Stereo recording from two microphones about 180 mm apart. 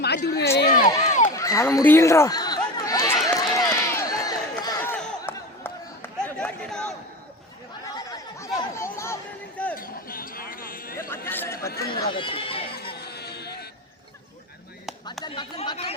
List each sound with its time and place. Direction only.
0.2 s speech: 55° left (ahead or behind)
0.9 s speech: 20° left (ahead or behind)
1.4 s chatter: 15° left (ahead or behind)
3.2 s run: 20° left (ahead or behind)
4.8 s a sound: 5° left (ahead or behind)
7.9 s chatter: 20° left (ahead or behind)
9.7 s a sound: 50° left (ahead or behind)
11.3 s chatter: 10° left (ahead or behind)
11.5 s chatter: 55° left (ahead or behind)
11.9 s neigh: 25° left (ahead or behind)
12.8 s music: 60° left (ahead or behind)
15.2 s chatter: 25° left (ahead or behind)